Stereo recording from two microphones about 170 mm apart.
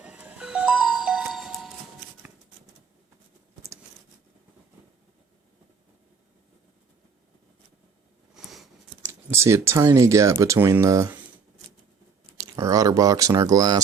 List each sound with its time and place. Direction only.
0.0 s music: 5° right (ahead or behind)
8.4 s a sound: centre (ahead or behind)
9.0 s speech: 15° right (ahead or behind)
12.4 s speech: 20° right (ahead or behind)